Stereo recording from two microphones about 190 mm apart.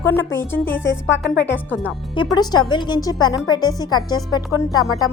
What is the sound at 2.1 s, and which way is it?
Speech, 25° left (ahead or behind).